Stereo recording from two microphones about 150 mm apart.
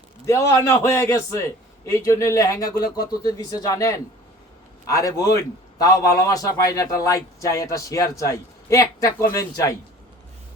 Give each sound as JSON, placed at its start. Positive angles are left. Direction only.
{"t": 0.3, "sound": "a man's voice", "side_deg": 20}